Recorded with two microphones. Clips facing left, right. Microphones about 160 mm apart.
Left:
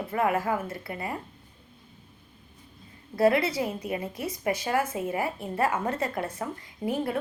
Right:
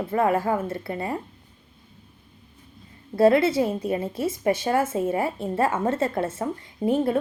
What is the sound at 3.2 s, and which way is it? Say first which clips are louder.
A woman's voice: right 5 dB; 25° right (ahead or behind).